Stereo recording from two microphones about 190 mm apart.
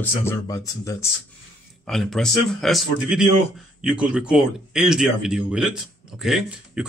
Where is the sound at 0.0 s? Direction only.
15° left (ahead or behind).